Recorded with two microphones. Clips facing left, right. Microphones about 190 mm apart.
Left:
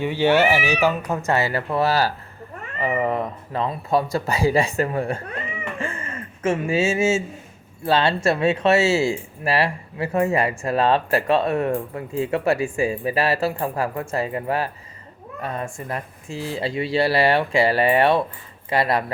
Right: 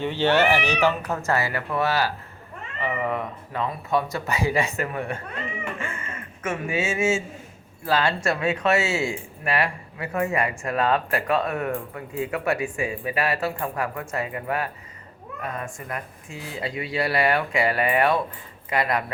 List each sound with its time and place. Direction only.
0.0 s speech: 10° left (ahead or behind)
1.4 s speech: 30° left (ahead or behind)